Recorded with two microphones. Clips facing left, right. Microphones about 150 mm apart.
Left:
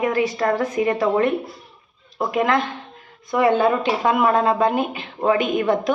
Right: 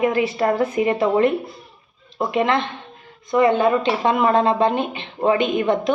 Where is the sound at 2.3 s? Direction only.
25° right (ahead or behind).